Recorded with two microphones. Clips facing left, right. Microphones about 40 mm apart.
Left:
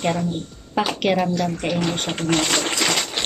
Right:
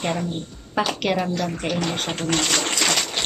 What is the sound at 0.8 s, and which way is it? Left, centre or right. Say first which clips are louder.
Speech: left 2 dB; centre.